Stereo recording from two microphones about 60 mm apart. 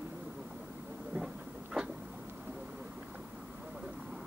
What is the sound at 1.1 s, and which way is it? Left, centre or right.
Train, centre.